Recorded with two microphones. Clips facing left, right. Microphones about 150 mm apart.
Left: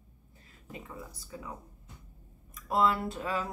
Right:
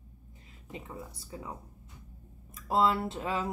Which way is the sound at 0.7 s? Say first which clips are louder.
Right 1 dB; 25° right (ahead or behind).